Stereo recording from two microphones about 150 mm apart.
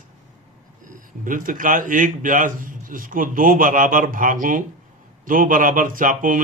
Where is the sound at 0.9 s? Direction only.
65° right (ahead or behind).